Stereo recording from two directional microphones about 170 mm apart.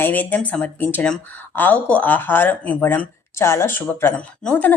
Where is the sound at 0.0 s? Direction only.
10° left (ahead or behind).